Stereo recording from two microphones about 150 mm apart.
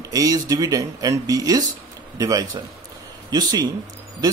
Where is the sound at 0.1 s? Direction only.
25° right (ahead or behind).